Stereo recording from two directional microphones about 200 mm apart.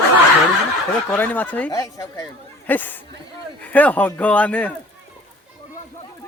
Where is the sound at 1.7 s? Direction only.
20° left (ahead or behind).